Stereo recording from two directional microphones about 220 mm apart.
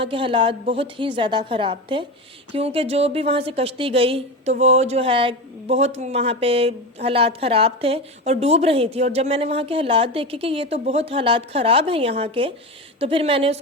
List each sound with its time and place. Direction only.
0.0 s speech: 25° right (ahead or behind)